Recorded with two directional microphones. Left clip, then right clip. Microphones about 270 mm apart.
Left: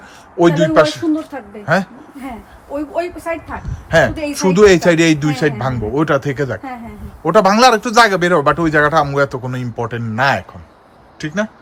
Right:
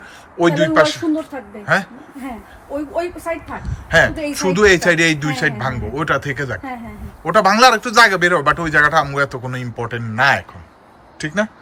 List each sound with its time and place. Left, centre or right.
0.3 s speech: left
3.6 s speech: centre